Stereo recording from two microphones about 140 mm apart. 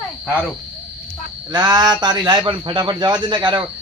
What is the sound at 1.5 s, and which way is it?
A man's voice, 30° right (ahead or behind).